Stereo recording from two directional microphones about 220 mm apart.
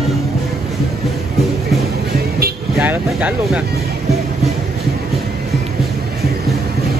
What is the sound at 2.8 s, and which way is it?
Speech, 5° right (ahead or behind).